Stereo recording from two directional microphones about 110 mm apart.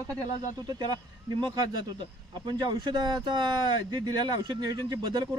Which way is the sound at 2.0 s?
40° right (ahead or behind).